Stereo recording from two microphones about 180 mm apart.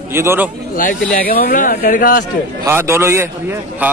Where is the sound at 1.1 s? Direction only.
55° left (ahead or behind).